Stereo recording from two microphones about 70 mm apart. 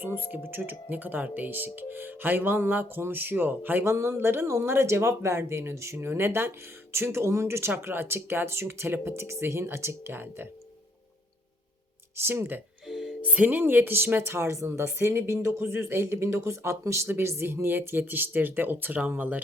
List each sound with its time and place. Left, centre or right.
0.0 s speech: right
3.8 s speech: right
12.1 s speech: right
12.9 s music: centre
13.2 s speech: right